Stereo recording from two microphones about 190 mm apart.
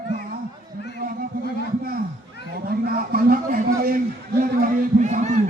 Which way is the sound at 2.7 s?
50° right (ahead or behind).